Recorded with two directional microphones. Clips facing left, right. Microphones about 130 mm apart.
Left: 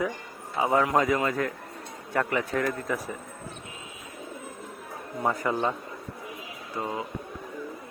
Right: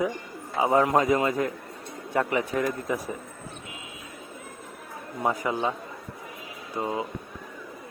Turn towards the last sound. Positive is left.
turn(degrees=-20)  # may be behind; listen again after turning